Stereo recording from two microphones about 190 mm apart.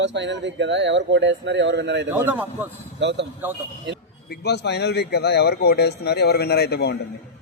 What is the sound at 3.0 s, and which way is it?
Speech, 65° right (ahead or behind).